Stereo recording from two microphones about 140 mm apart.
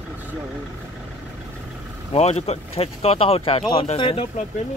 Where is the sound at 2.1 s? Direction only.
50° left (ahead or behind).